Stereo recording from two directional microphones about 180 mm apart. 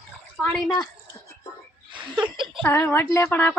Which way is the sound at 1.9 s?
25° right (ahead or behind).